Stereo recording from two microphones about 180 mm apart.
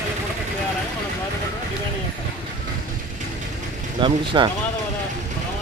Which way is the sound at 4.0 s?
25° right (ahead or behind).